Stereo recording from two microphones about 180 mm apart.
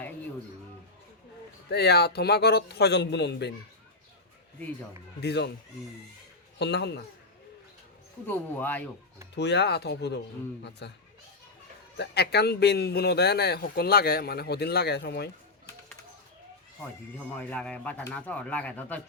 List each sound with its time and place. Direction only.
1.7 s a man's voice: 65° left (ahead or behind)
5.2 s speech: 70° left (ahead or behind)
6.6 s speech: 65° left (ahead or behind)
8.3 s speech: 10° left (ahead or behind)
9.3 s speech: 70° left (ahead or behind)
11.9 s a man's voice: 65° left (ahead or behind)
17.3 s speech: 5° left (ahead or behind)